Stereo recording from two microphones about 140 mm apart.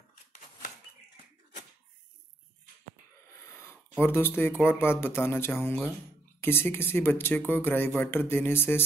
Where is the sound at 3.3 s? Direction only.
20° left (ahead or behind).